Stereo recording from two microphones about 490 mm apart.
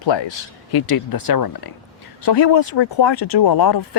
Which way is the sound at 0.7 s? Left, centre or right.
Left.